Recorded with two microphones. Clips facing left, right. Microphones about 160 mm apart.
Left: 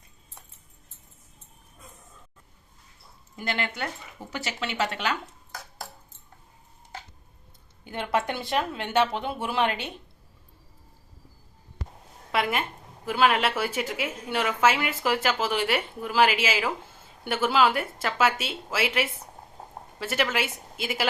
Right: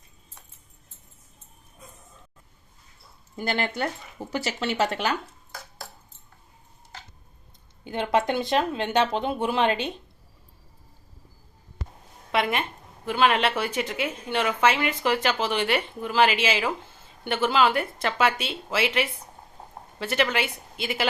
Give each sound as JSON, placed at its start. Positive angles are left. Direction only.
{"t": 3.3, "sound": "speech", "side_deg": -35}
{"t": 7.9, "sound": "speech", "side_deg": -20}
{"t": 12.3, "sound": "a woman's voice", "side_deg": 5}